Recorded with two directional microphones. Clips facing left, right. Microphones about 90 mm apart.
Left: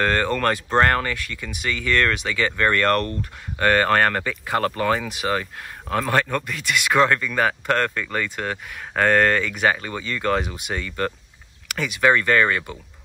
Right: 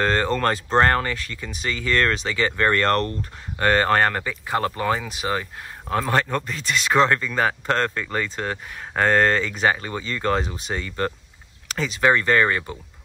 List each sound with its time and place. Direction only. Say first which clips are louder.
0.0 s speech: even; 25° right (ahead or behind)